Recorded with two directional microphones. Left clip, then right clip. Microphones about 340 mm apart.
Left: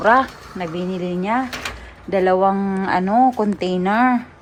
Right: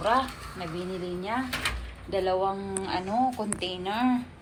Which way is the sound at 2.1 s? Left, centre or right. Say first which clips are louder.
Left 11 dB; left.